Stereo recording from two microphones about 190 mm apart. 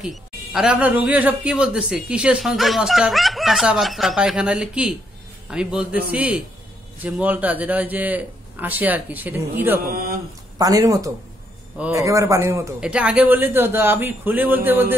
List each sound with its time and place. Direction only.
0.0 s a man's voice: centre (ahead or behind)
9.8 s speech: 50° right (ahead or behind)
10.6 s a man's voice: 20° right (ahead or behind)